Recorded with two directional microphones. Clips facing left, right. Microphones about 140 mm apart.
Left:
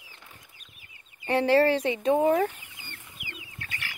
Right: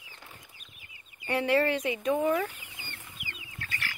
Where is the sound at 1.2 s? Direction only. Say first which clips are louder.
Left 5 dB; 30° left (ahead or behind).